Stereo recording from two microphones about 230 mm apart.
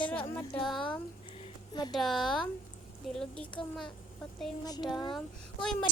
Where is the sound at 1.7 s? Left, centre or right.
Centre.